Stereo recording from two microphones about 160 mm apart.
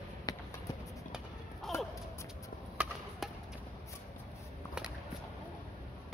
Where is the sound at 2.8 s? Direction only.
5° right (ahead or behind).